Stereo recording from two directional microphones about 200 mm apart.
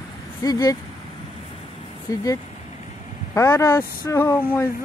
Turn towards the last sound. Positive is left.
turn(degrees=10)  # may be behind; listen again after turning